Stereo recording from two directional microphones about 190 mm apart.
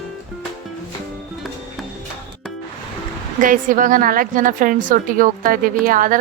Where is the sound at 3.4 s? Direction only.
45° right (ahead or behind).